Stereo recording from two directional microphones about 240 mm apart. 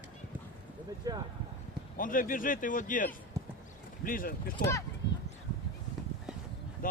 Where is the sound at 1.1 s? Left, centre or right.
Centre.